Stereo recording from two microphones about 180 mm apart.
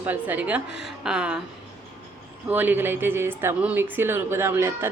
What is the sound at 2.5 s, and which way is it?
A woman's voice, 10° right (ahead or behind).